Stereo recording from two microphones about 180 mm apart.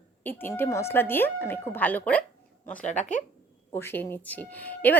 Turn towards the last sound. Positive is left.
turn(degrees=10)  # may be behind; listen again after turning